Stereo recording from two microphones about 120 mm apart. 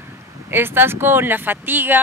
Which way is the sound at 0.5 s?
20° right (ahead or behind).